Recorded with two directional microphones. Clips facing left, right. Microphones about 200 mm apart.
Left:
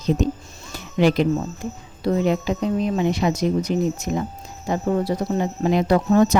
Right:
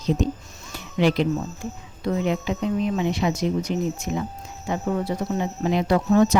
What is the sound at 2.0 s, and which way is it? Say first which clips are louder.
Speech: left 4 dB; 40° left (ahead or behind).